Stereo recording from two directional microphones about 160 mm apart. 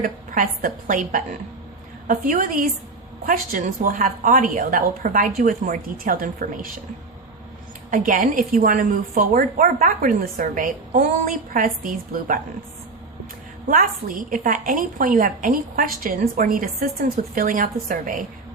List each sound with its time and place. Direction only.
0.0 s a woman's voice: 60° right (ahead or behind)
7.9 s a woman's voice: 55° right (ahead or behind)
13.7 s a woman's voice: 60° right (ahead or behind)